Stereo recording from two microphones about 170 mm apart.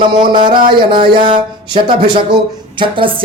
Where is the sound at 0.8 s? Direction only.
30° right (ahead or behind).